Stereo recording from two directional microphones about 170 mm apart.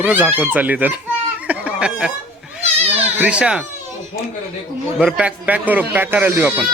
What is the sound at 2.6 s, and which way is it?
Children playing, 35° right (ahead or behind).